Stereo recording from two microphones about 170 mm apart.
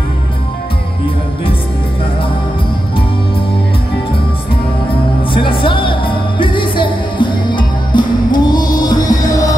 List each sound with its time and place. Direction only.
5.3 s music: 30° left (ahead or behind)